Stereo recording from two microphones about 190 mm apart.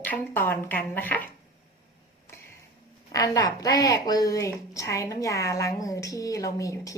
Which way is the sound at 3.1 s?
20° left (ahead or behind).